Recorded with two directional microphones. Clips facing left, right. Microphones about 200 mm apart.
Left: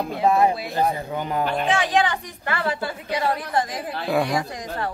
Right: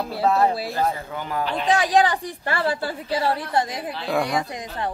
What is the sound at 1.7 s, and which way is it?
A woman's voice, 35° right (ahead or behind).